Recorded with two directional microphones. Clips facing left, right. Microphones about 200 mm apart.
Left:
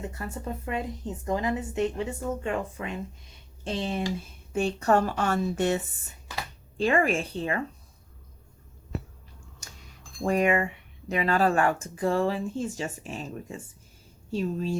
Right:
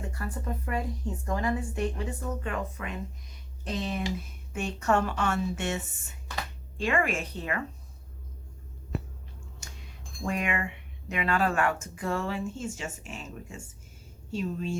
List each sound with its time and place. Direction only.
0.1 s a woman's voice: 25° left (ahead or behind)
10.2 s speech: 35° left (ahead or behind)